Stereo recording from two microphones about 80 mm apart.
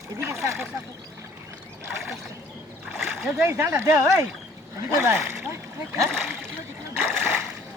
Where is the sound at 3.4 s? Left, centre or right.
Right.